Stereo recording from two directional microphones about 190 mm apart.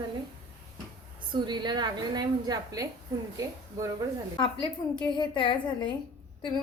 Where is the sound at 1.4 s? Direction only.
25° right (ahead or behind).